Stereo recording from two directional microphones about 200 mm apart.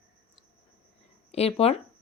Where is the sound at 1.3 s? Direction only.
30° left (ahead or behind).